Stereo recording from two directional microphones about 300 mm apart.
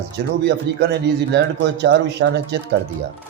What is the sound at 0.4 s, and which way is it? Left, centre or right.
Speech, right.